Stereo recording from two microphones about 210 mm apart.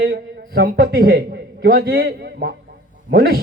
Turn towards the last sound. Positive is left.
turn(degrees=-50)  # may be behind; listen again after turning